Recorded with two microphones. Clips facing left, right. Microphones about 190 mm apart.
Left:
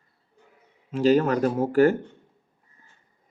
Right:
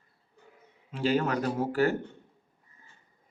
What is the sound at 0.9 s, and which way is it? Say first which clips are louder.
Speech: left 7 dB; 45° left (ahead or behind).